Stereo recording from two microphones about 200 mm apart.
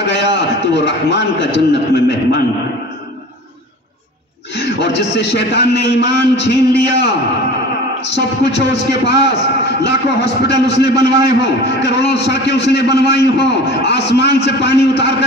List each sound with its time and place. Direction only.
0.0 s a man's voice: 55° left (ahead or behind)
4.6 s a man's voice: 55° left (ahead or behind)
10.5 s a man's voice: 20° right (ahead or behind)
11.2 s a man's voice: 55° left (ahead or behind)